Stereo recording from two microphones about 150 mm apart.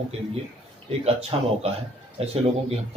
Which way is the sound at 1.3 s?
40° right (ahead or behind).